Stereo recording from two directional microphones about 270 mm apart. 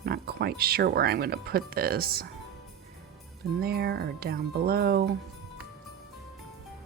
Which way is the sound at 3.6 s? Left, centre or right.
Right.